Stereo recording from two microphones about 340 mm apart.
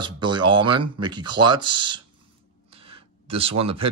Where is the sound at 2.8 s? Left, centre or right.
Centre.